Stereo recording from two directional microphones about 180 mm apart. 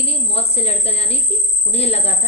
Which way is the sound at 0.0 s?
35° left (ahead or behind).